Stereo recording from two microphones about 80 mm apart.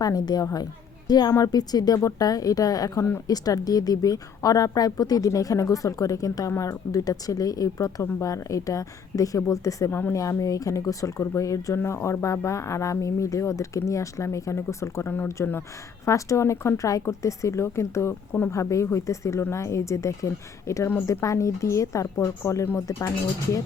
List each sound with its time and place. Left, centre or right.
0.0 s a woman's voice: left
9.9 s a woman's voice: left
10.2 s a woman's voice: left
11.8 s speech: left